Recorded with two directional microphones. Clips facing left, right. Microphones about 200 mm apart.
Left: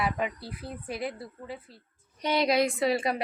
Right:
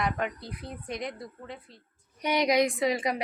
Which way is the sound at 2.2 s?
15° right (ahead or behind).